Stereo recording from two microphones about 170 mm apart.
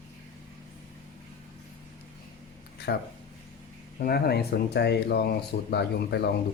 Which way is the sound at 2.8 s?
70° left (ahead or behind).